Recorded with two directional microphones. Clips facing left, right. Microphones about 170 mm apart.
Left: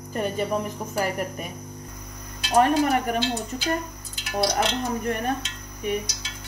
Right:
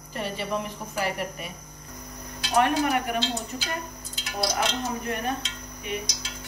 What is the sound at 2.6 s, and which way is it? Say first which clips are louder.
Speech: left 3 dB; 40° left (ahead or behind).